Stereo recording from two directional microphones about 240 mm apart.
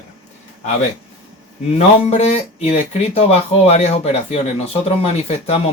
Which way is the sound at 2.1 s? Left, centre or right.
Left.